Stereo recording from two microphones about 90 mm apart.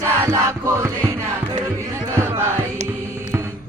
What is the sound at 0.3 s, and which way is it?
Music, 30° right (ahead or behind).